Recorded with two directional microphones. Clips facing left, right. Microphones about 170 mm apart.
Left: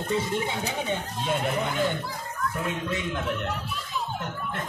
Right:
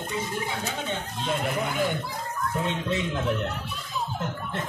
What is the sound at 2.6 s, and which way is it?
Speech, 30° right (ahead or behind).